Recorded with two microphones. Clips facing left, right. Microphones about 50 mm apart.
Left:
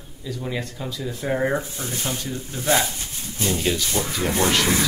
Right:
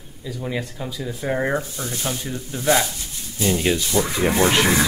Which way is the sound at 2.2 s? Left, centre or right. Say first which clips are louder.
Right 3 dB; right.